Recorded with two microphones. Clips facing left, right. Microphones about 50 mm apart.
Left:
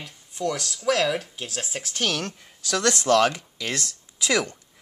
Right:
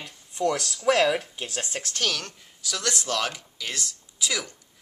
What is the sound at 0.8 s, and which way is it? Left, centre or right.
Speech, centre.